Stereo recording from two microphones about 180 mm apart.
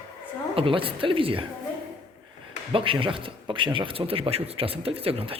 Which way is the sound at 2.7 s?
30° right (ahead or behind).